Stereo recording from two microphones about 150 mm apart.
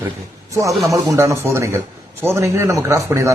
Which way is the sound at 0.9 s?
20° right (ahead or behind).